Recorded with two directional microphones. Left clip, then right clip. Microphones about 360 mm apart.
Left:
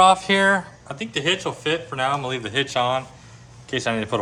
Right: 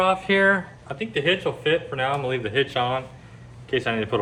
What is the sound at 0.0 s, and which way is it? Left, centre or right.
Speech, centre.